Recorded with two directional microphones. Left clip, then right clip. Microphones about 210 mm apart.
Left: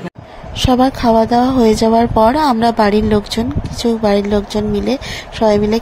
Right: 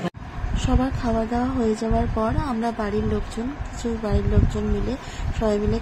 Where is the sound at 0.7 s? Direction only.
35° left (ahead or behind).